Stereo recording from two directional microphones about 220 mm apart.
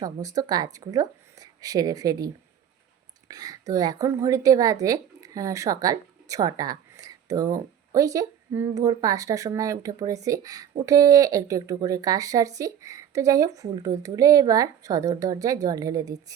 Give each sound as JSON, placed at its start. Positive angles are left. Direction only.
{"t": 0.0, "sound": "speech", "side_deg": -15}